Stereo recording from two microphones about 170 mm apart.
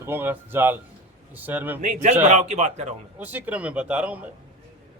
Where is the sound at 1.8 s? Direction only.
45° right (ahead or behind).